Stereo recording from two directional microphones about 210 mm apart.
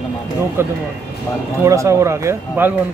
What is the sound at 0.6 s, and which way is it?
Speech, 10° right (ahead or behind).